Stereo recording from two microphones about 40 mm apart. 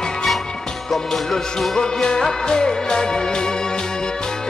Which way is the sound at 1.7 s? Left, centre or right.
Centre.